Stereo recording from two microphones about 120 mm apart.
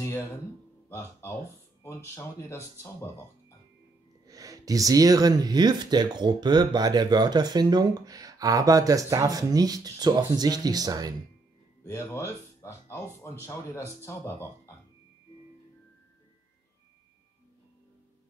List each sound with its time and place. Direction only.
0.8 s speech: 20° left (ahead or behind)
4.3 s speech: 30° right (ahead or behind)
11.8 s speech: 25° left (ahead or behind)